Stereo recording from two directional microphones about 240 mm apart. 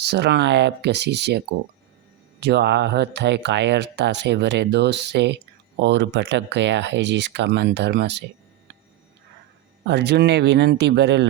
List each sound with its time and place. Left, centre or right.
0.0 s speech: right
2.4 s speech: right
9.8 s speech: right